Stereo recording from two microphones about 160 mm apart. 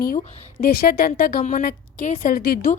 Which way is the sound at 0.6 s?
70° left (ahead or behind).